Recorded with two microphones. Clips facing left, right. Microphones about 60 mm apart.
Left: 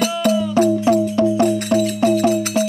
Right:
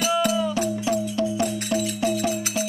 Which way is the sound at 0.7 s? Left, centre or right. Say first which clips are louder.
Left 8 dB; left.